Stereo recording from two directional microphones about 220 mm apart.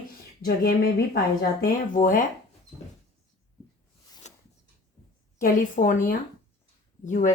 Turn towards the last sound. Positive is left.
turn(degrees=35)  # may be behind; listen again after turning